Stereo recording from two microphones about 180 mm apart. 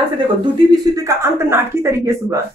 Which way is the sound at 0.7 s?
20° right (ahead or behind).